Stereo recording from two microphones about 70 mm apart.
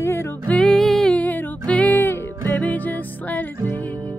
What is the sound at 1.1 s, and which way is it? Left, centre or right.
Music, left.